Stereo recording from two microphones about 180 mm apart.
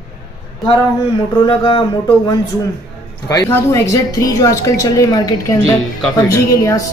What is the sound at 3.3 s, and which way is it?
A woman's voice, 20° left (ahead or behind).